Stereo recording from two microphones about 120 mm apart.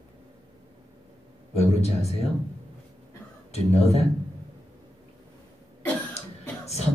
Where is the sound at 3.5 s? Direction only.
60° left (ahead or behind).